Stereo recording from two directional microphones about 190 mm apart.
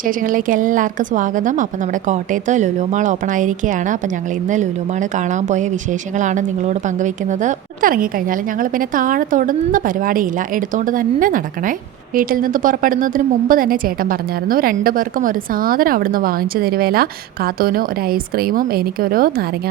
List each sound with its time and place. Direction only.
0.0 s a woman's voice: 45° right (ahead or behind)